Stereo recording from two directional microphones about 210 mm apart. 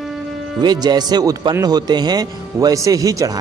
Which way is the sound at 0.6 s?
20° right (ahead or behind).